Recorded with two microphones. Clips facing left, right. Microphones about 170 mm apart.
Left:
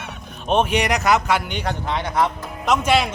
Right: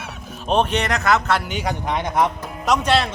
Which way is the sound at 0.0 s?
Centre (ahead or behind).